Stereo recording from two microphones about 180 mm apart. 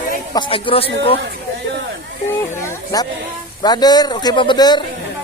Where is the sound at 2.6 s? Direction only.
20° left (ahead or behind).